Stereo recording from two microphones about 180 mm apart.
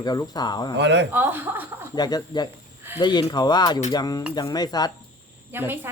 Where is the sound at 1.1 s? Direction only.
10° right (ahead or behind).